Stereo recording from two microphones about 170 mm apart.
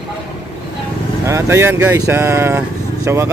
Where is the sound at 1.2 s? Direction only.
15° right (ahead or behind).